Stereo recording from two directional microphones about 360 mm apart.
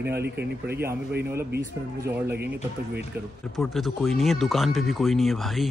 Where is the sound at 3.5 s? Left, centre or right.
Centre.